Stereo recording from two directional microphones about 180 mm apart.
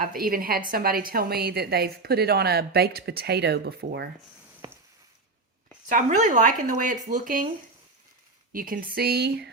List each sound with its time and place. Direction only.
0.0 s a woman's voice: 55° right (ahead or behind)
5.9 s speech: 45° right (ahead or behind)
8.5 s a woman's voice: 50° right (ahead or behind)